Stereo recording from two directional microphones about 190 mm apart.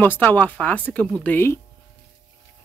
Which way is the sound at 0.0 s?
10° left (ahead or behind).